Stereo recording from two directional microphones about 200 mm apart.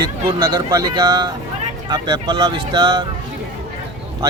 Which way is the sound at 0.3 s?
20° right (ahead or behind).